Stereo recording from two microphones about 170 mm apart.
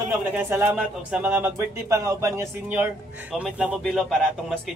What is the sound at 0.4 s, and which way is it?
Speech, 15° right (ahead or behind).